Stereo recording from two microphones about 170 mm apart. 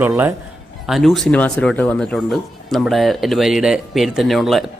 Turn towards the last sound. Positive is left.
turn(degrees=0)  # may be behind; listen again after turning